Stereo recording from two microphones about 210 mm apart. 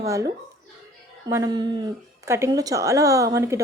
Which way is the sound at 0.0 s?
15° right (ahead or behind).